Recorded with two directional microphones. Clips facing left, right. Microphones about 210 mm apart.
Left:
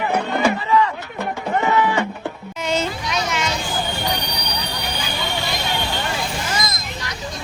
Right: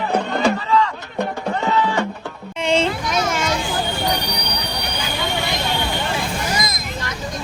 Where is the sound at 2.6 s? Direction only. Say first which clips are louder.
Right 4 dB; 30° right (ahead or behind).